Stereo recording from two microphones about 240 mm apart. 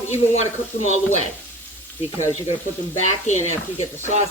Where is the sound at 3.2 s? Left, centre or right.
Left.